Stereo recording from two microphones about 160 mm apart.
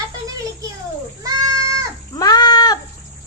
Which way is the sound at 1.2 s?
20° right (ahead or behind).